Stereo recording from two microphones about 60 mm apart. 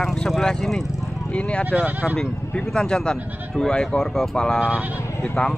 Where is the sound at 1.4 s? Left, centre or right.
Centre.